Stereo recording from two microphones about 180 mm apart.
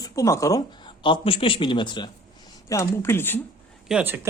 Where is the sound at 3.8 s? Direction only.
10° right (ahead or behind).